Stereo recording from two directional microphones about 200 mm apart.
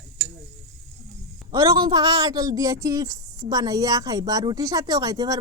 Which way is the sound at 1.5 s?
20° right (ahead or behind).